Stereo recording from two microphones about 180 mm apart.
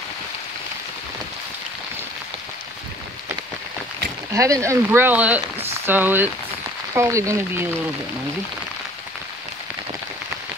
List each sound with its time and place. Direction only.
4.3 s speech: 20° right (ahead or behind)